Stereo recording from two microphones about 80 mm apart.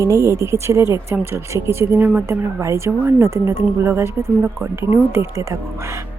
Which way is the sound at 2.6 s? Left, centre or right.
Right.